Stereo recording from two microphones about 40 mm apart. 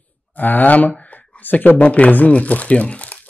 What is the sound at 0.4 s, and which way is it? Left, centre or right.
Speech, left.